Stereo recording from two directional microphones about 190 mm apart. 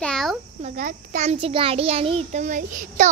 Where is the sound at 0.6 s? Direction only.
40° right (ahead or behind).